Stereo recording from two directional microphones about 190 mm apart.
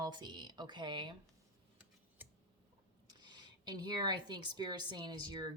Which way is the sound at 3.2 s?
20° right (ahead or behind).